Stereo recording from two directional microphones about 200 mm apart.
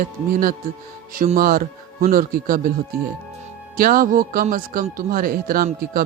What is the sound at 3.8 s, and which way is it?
Speech, 45° right (ahead or behind).